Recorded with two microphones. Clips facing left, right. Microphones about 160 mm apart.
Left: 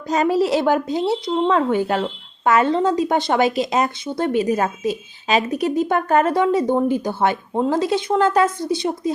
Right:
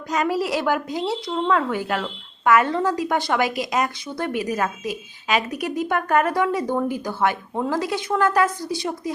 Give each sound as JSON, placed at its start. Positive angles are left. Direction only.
{"t": 0.1, "sound": "speech", "side_deg": 30}